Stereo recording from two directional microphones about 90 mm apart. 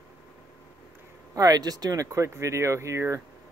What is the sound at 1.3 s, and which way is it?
Speech, 45° right (ahead or behind).